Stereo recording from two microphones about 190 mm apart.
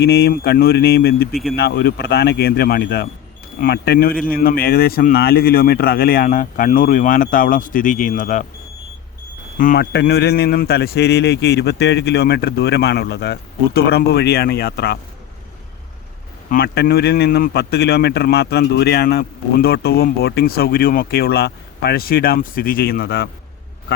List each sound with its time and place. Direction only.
0.0 s a man's voice: 55° left (ahead or behind)
1.3 s speech: centre (ahead or behind)
1.5 s a man's voice: 55° left (ahead or behind); by 8.4 s 40° left (ahead or behind)
9.6 s a man's voice: 50° left (ahead or behind)
16.5 s a man's voice: 55° left (ahead or behind)